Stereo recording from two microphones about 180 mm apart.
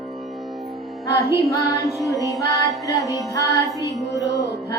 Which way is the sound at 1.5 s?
20° left (ahead or behind).